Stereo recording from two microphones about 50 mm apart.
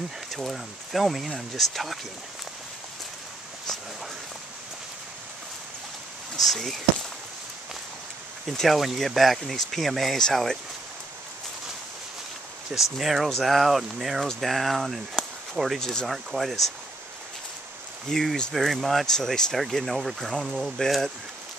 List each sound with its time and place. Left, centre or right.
0.3 s speech: centre
6.3 s speech: centre
8.5 s speech: centre
12.9 s speech: centre
15.8 s speech: centre
16.1 s speech: centre
18.1 s speech: centre
20.2 s speech: centre